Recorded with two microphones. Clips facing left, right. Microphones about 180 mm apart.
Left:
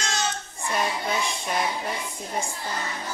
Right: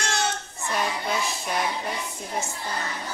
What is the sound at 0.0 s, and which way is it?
Child singing, 65° right (ahead or behind).